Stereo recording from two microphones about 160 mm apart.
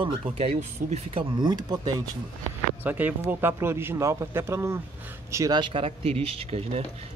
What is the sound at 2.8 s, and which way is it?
Speech, 10° right (ahead or behind).